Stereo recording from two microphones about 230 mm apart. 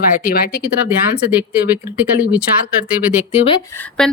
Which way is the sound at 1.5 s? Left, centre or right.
Centre.